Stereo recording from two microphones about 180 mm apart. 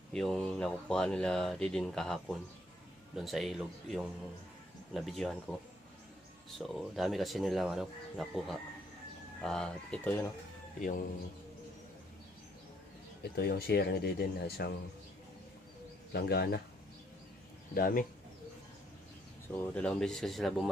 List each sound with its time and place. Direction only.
0.1 s speech: 5° left (ahead or behind)
6.6 s speech: centre (ahead or behind)
13.2 s speech: 60° left (ahead or behind)
16.1 s speech: 60° left (ahead or behind)
17.7 s speech: 50° left (ahead or behind)
19.5 s speech: 5° left (ahead or behind)